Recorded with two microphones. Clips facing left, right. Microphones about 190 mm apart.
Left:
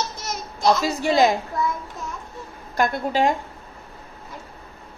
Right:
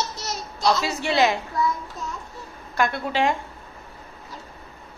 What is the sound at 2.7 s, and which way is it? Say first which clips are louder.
Speech: left 2 dB; 40° left (ahead or behind).